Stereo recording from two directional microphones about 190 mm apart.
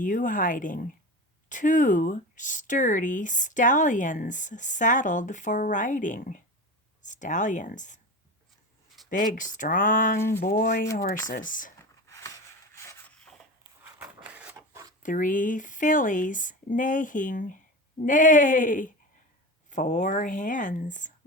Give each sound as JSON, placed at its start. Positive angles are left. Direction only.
{"t": 0.0, "sound": "speech", "side_deg": 45}
{"t": 9.0, "sound": "speech", "side_deg": 45}
{"t": 10.2, "sound": "a sound", "side_deg": 15}
{"t": 10.4, "sound": "speech", "side_deg": 50}
{"t": 12.7, "sound": "a sound", "side_deg": 15}
{"t": 14.0, "sound": "printer", "side_deg": -10}
{"t": 15.0, "sound": "speech", "side_deg": 45}